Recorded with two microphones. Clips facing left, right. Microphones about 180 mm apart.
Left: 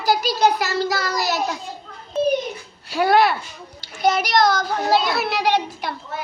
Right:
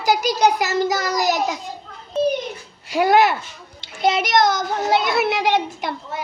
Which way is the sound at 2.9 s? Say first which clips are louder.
Right 1 dB; 15° right (ahead or behind).